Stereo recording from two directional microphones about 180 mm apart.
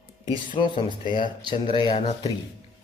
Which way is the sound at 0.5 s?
25° left (ahead or behind).